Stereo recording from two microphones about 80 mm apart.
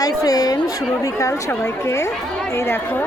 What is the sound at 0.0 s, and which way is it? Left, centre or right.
Speech, left.